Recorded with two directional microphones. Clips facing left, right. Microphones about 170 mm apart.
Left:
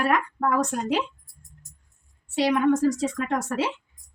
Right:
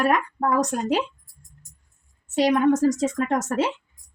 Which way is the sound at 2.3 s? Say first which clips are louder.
Right 2 dB; 40° right (ahead or behind).